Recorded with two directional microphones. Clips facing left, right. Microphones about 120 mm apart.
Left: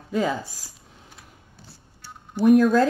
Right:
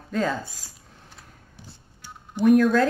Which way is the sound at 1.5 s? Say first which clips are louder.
Right 1 dB; 15° right (ahead or behind).